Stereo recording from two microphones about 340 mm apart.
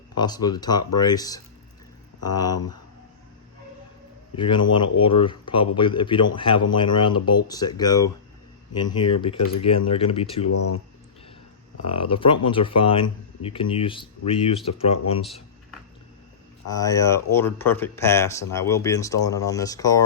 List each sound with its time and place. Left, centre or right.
0.2 s speech: centre
4.4 s speech: centre
11.9 s speech: centre
16.6 s speech: centre